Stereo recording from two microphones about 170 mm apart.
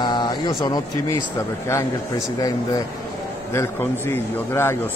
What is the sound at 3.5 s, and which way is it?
Speech, 15° left (ahead or behind).